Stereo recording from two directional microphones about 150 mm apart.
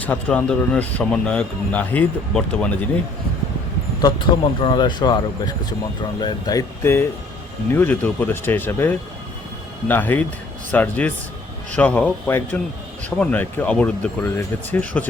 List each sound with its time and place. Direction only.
0.0 s speech: 10° left (ahead or behind)
4.3 s speech: 30° left (ahead or behind); by 15.0 s 10° left (ahead or behind)